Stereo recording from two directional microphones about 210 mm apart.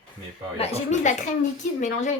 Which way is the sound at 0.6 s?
35° left (ahead or behind).